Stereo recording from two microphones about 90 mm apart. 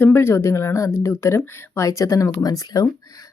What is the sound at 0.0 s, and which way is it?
Speech, 25° left (ahead or behind).